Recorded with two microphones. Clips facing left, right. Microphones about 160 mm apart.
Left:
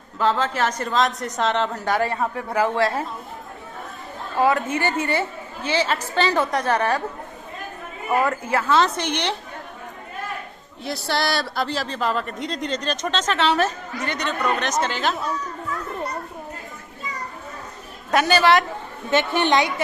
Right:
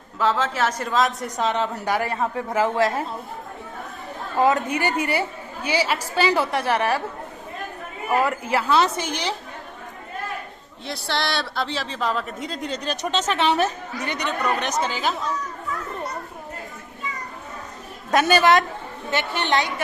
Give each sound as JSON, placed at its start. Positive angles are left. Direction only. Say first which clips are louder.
{"t": 0.2, "sound": "a woman's voice", "louder": "left 1 dB", "side_deg": -5}
{"t": 4.4, "sound": "speech", "louder": "even", "side_deg": -20}
{"t": 8.2, "sound": "speech", "louder": "even", "side_deg": -15}
{"t": 10.8, "sound": "speech", "louder": "left 3 dB", "side_deg": 5}
{"t": 18.1, "sound": "a woman's voice", "louder": "even", "side_deg": -20}
{"t": 19.1, "sound": "a woman's voice", "louder": "left 4 dB", "side_deg": 15}